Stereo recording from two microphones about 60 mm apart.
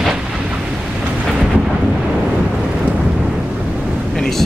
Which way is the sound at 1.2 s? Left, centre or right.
Centre.